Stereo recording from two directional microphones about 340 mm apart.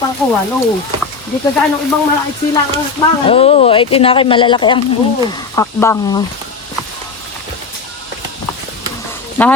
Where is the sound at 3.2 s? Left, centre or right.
Centre.